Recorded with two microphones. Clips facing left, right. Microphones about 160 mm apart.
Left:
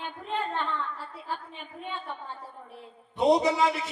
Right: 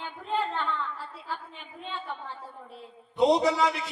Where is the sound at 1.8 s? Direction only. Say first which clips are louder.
Left 1 dB; 15° left (ahead or behind).